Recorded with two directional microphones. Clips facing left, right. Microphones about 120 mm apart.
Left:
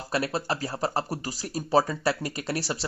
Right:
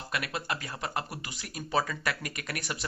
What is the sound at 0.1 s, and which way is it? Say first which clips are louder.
Speech: left 7 dB; 35° left (ahead or behind).